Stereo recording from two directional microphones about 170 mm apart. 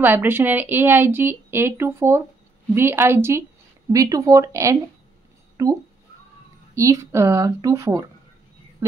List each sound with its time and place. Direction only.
0.0 s speech: 10° right (ahead or behind)